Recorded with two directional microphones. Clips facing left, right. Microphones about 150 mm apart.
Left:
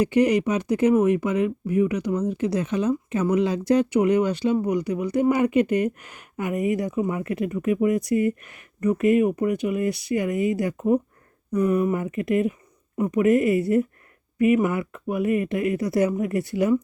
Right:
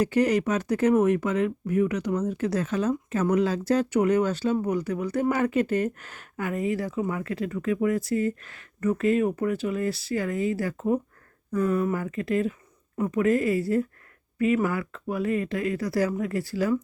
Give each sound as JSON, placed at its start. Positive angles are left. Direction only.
{"t": 0.0, "sound": "speech", "side_deg": 15}